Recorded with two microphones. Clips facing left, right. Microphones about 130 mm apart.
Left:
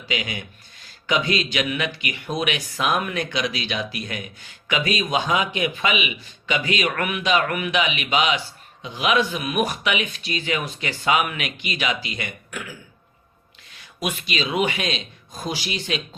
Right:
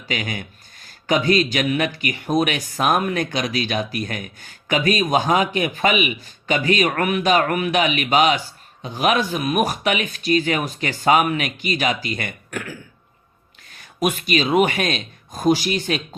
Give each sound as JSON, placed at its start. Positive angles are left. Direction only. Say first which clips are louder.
{"t": 0.1, "sound": "a man's voice", "louder": "right 2 dB", "side_deg": -45}
{"t": 13.7, "sound": "a man's voice", "louder": "right 6 dB", "side_deg": -45}